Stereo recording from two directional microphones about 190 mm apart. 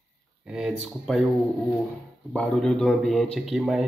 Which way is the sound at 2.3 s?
5° left (ahead or behind).